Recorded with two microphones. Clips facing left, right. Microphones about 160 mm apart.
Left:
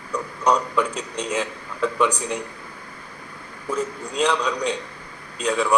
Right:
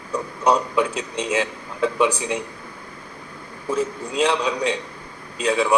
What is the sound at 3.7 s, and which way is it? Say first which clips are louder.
Speech: right 2 dB; 5° right (ahead or behind).